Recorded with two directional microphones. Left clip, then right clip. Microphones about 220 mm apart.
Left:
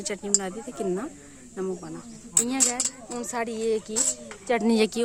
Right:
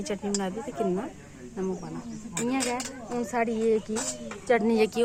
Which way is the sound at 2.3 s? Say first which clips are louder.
Left 2 dB; 55° left (ahead or behind).